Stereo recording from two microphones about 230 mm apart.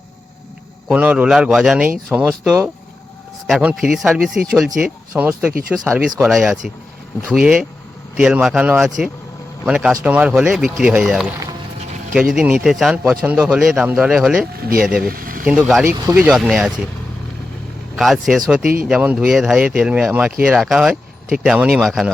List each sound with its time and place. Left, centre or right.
0.9 s a man's voice: centre
12.3 s a man's voice: centre
15.0 s vehicle: right
15.4 s a man's voice: centre
17.9 s a man's voice: centre